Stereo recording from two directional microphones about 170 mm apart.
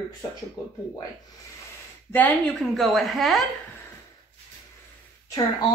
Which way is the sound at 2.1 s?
10° left (ahead or behind).